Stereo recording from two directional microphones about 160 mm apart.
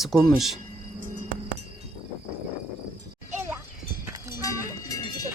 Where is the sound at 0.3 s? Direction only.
Centre (ahead or behind).